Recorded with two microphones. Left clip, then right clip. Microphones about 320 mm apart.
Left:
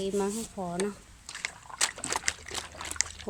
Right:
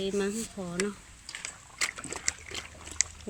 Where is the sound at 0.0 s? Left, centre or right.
Centre.